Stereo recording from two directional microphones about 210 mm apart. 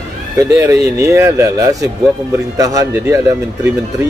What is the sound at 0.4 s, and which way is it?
Speech, 15° right (ahead or behind).